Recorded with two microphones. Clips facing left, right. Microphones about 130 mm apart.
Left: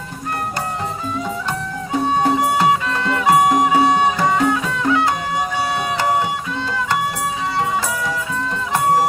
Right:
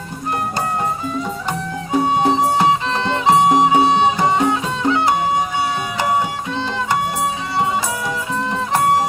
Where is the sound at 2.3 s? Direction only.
25° right (ahead or behind).